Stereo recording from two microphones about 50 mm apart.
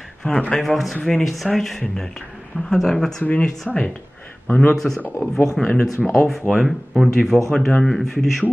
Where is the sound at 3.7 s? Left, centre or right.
Centre.